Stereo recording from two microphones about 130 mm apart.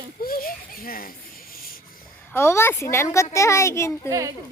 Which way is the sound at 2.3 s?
20° left (ahead or behind).